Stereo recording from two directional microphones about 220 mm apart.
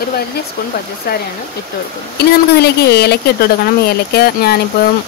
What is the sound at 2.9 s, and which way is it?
Speech, 45° left (ahead or behind).